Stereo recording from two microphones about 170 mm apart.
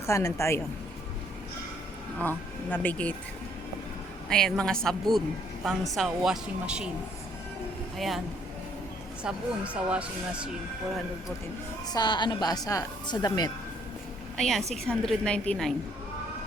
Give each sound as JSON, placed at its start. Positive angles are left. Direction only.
{"t": 0.0, "sound": "speech", "side_deg": 15}
{"t": 2.2, "sound": "speech", "side_deg": 10}
{"t": 4.3, "sound": "a woman's voice", "side_deg": 5}
{"t": 7.9, "sound": "a woman's voice", "side_deg": 0}
{"t": 9.2, "sound": "speech", "side_deg": -5}
{"t": 11.9, "sound": "a woman's voice", "side_deg": 25}
{"t": 14.3, "sound": "a woman's voice", "side_deg": 0}